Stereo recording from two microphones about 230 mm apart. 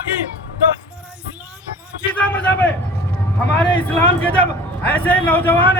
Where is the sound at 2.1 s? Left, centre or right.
Centre.